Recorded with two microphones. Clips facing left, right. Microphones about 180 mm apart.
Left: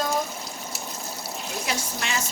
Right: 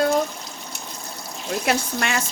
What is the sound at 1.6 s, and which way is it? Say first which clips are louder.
Speech: right 8 dB; 60° right (ahead or behind).